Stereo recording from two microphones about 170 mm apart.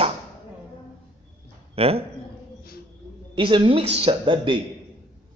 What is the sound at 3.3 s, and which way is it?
A man's voice, 30° right (ahead or behind).